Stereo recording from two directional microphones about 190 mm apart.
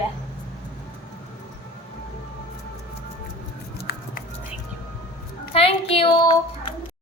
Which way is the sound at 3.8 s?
55° left (ahead or behind).